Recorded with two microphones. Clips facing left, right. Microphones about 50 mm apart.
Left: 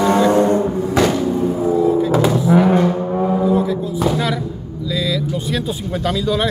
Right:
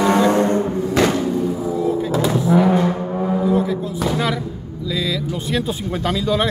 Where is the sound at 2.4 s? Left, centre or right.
Left.